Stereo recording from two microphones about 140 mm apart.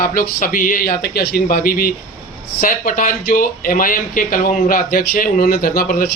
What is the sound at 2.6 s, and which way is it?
Speech, 75° left (ahead or behind).